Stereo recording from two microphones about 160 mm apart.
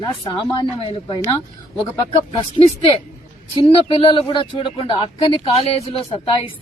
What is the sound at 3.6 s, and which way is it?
Speech, 35° left (ahead or behind).